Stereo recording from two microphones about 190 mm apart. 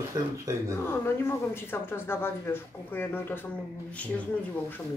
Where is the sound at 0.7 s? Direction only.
15° left (ahead or behind).